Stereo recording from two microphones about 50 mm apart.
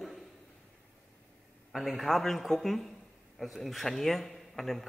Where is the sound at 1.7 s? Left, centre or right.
Centre.